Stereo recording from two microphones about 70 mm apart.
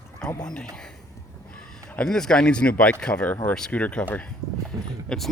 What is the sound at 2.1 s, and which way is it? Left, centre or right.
Speech, centre.